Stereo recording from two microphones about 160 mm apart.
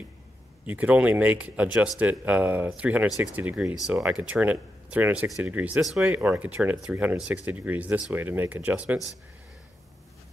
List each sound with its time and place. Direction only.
0.7 s speech: 10° right (ahead or behind)